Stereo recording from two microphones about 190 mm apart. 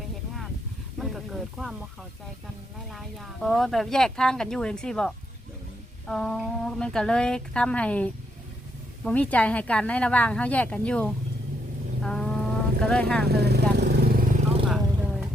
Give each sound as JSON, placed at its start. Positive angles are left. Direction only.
{"t": 0.9, "sound": "snake", "side_deg": 0}
{"t": 2.9, "sound": "speech", "side_deg": 0}
{"t": 12.0, "sound": "a sound", "side_deg": 5}
{"t": 12.8, "sound": "speech", "side_deg": 5}
{"t": 13.2, "sound": "speech", "side_deg": -60}
{"t": 14.7, "sound": "vehicle", "side_deg": 0}